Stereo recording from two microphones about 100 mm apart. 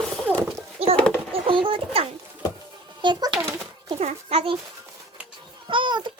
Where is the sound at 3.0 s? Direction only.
50° right (ahead or behind).